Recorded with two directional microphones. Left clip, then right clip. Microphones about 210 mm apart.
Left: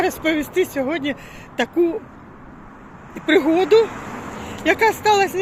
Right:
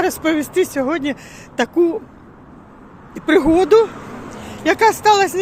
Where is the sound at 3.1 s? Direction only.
15° right (ahead or behind).